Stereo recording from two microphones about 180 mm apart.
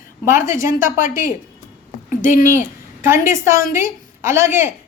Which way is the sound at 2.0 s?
45° left (ahead or behind).